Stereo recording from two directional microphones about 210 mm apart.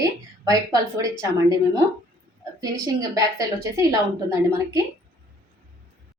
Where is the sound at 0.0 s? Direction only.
15° right (ahead or behind).